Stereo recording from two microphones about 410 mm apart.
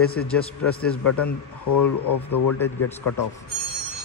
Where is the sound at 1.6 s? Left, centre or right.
Left.